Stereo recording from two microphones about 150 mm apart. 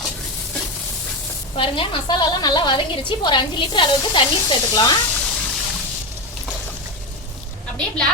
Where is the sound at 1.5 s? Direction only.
35° left (ahead or behind).